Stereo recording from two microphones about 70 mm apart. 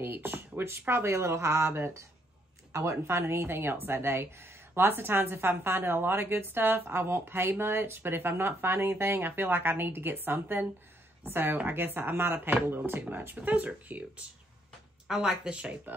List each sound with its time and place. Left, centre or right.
0.0 s speech: right
15.0 s speech: centre